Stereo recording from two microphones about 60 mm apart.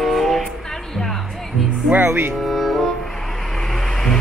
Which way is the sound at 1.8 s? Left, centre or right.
Right.